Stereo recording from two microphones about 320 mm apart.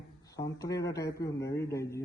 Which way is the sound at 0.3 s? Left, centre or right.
Centre.